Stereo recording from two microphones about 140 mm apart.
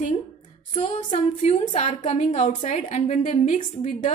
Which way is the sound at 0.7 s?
35° left (ahead or behind).